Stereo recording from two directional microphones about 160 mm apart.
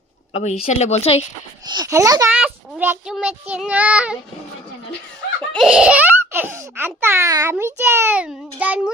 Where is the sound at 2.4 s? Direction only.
10° right (ahead or behind).